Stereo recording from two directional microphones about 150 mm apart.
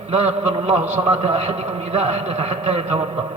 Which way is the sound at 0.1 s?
45° right (ahead or behind).